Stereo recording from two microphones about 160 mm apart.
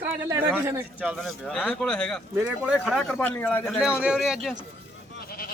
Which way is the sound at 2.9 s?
10° left (ahead or behind).